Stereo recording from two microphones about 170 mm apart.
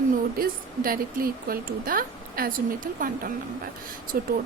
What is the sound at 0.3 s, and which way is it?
A woman's voice, 60° right (ahead or behind).